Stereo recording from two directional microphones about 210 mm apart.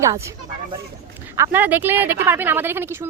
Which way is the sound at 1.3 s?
10° right (ahead or behind).